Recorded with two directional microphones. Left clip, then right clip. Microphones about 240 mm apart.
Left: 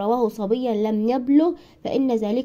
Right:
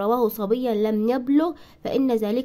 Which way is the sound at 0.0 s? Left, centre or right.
Centre.